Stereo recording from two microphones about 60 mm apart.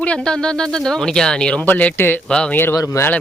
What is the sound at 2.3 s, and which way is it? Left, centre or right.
Speech, centre.